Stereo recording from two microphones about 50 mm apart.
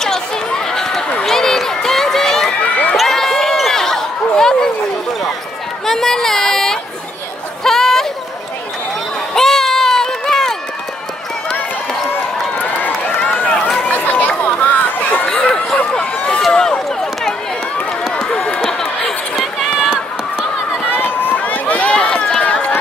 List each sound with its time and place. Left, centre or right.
0.0 s chatter: centre
1.2 s run: centre
2.6 s run: left
3.0 s a sound: centre
5.9 s speech: centre
7.6 s a sound: centre
9.3 s run: centre
13.8 s chatter: left
15.2 s a sound: centre
16.3 s run: centre
18.6 s a sound: centre
19.3 s run: centre
20.9 s run: left